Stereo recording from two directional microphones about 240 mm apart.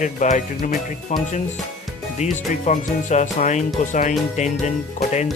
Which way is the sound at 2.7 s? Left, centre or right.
Left.